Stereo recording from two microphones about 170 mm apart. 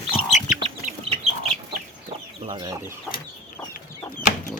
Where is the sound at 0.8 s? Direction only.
35° right (ahead or behind).